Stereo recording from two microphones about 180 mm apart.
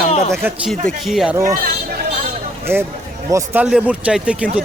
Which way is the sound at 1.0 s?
Centre (ahead or behind).